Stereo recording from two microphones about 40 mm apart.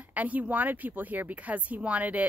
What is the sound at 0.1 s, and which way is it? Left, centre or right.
A woman's voice, right.